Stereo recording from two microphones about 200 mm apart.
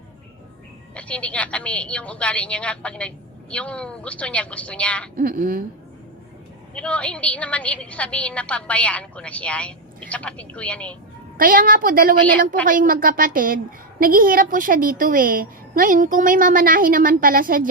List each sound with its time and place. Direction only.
0.9 s a woman's voice: 5° left (ahead or behind)
5.1 s a woman's voice: 45° right (ahead or behind)
6.7 s a woman's voice: 5° left (ahead or behind)
11.3 s a woman's voice: 45° right (ahead or behind)